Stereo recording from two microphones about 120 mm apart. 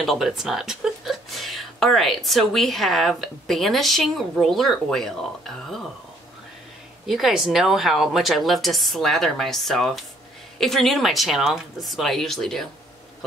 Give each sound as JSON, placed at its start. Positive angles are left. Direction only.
{"t": 0.0, "sound": "a woman's voice", "side_deg": 0}
{"t": 7.1, "sound": "a woman's voice", "side_deg": 0}